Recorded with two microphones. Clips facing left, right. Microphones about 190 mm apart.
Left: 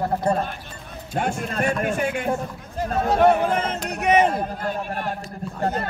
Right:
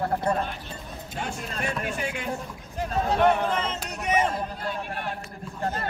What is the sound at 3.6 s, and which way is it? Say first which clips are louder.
A man's voice: left 5 dB; 60° left (ahead or behind).